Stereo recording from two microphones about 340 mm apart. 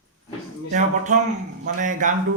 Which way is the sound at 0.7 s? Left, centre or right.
Right.